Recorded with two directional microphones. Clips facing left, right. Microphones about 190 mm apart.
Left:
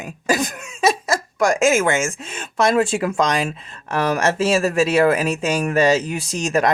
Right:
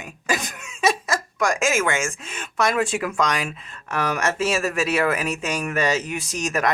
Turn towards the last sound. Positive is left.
turn(degrees=30)  # may be behind; listen again after turning